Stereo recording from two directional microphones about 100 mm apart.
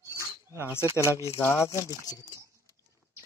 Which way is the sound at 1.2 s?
25° left (ahead or behind).